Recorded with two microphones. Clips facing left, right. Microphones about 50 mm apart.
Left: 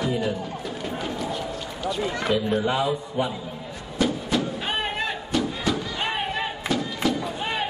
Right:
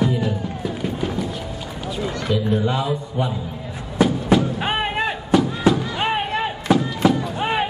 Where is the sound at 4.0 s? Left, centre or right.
Centre.